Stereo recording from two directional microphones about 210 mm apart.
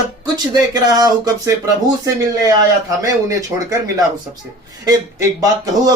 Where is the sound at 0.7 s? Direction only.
20° right (ahead or behind).